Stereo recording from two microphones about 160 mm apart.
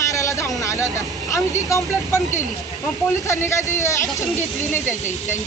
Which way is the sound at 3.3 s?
20° left (ahead or behind).